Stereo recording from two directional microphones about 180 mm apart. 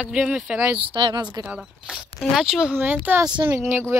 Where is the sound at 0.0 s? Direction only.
5° right (ahead or behind).